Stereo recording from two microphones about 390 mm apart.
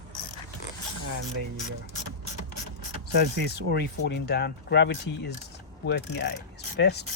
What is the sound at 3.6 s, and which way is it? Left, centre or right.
Speech, left.